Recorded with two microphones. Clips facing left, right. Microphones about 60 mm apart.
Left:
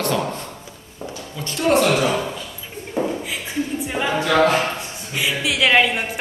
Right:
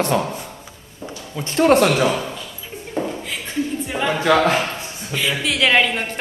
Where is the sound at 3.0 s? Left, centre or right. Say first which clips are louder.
Left 2 dB; centre.